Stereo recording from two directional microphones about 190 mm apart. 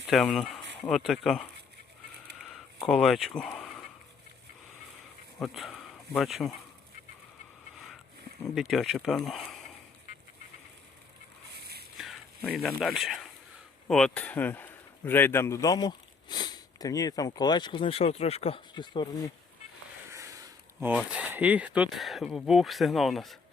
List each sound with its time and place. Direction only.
0.1 s speech: centre (ahead or behind)
2.8 s speech: centre (ahead or behind)
5.4 s speech: centre (ahead or behind)
8.5 s speech: centre (ahead or behind)
11.9 s speech: centre (ahead or behind); by 19.0 s 25° left (ahead or behind)
20.1 s speech: 15° right (ahead or behind); by 23.4 s centre (ahead or behind)